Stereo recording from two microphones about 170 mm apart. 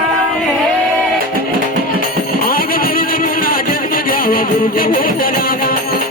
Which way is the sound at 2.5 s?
60° left (ahead or behind).